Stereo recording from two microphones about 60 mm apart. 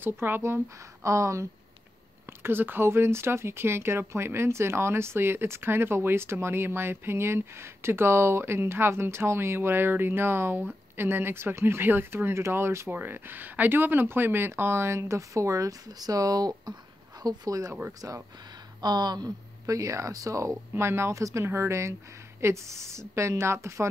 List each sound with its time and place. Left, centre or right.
0.0 s speech: right
1.0 s speech: right
2.4 s speech: right
12.9 s speech: right
17.2 s speech: right
18.0 s speech: right
19.2 s speech: right
20.7 s speech: right
21.2 s speech: right
21.5 s speech: right